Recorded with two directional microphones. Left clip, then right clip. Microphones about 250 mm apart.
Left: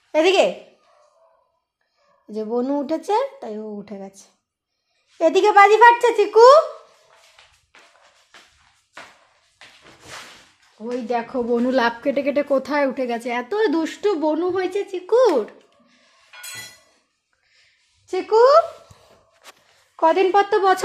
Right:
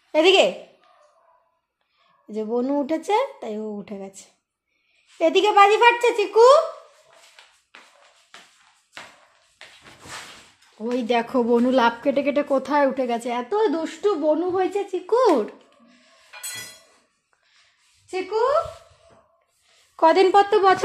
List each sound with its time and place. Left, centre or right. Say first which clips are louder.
0.1 s a woman's voice: even; centre
2.2 s a woman's voice: left 1 dB; centre
5.2 s a child's voice: left 2 dB; left
10.8 s speech: right 2 dB; centre
11.5 s a woman's voice: even; centre
13.5 s speech: left 1 dB; centre
15.0 s music: left 2 dB; centre
20.0 s a woman's voice: right 1 dB; centre